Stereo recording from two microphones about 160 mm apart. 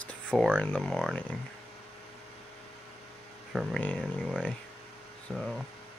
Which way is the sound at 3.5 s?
5° right (ahead or behind).